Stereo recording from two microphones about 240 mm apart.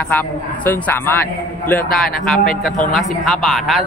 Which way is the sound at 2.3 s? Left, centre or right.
Left.